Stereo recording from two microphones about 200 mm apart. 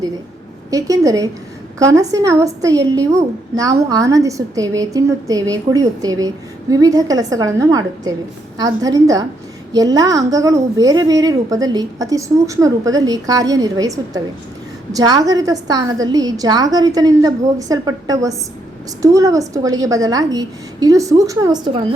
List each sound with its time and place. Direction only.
0.7 s a woman's voice: 20° right (ahead or behind)